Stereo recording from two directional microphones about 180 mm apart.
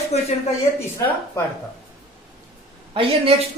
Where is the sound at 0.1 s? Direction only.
35° left (ahead or behind).